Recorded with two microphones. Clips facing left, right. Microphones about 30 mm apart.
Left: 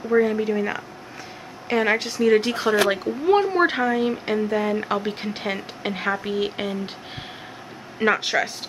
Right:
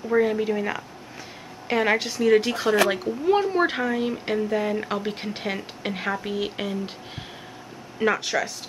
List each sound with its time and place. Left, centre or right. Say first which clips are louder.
0.2 s a woman's voice: left 1 dB; centre
8.0 s speech: left 3 dB; left